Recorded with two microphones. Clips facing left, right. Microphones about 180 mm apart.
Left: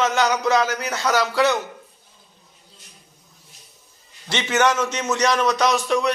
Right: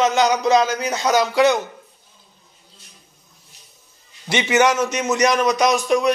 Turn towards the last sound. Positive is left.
turn(degrees=-15)  # may be behind; listen again after turning